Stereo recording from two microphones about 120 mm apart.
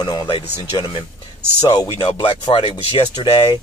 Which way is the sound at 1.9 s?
45° left (ahead or behind).